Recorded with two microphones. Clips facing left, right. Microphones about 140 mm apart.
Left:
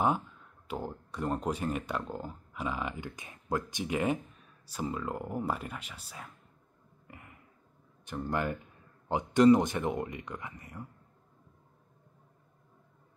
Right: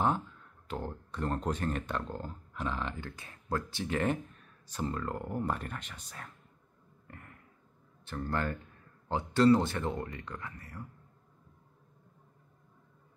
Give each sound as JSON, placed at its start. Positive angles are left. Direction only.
{"t": 0.7, "sound": "speech", "side_deg": 10}
{"t": 7.1, "sound": "a sound", "side_deg": 10}
{"t": 8.0, "sound": "speech", "side_deg": 15}